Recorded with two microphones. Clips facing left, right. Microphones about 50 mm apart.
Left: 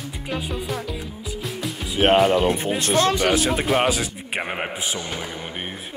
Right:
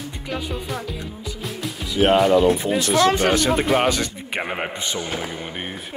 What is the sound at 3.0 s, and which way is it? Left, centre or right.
Speech, right.